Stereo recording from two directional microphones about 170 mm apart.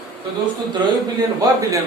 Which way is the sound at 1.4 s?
20° right (ahead or behind).